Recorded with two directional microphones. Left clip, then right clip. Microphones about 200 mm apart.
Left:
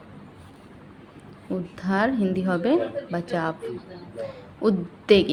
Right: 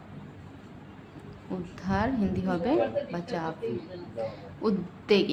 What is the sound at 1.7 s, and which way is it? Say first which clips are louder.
A woman's voice: left 5 dB; 25° left (ahead or behind).